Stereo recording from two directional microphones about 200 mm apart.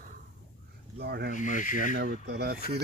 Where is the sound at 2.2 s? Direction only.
55° right (ahead or behind).